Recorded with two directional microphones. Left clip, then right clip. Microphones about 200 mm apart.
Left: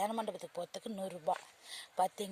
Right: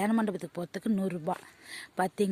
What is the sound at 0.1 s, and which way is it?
Speech, 30° right (ahead or behind).